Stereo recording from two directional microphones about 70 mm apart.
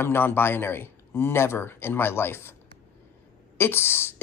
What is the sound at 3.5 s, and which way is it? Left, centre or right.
Speech, left.